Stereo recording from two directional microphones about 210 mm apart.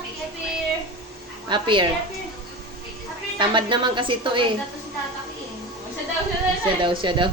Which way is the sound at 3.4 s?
20° right (ahead or behind).